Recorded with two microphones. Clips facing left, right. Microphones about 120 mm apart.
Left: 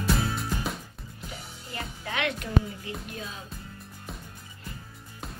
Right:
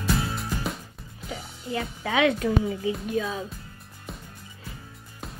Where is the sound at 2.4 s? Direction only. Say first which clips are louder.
Right 4 dB; 90° right.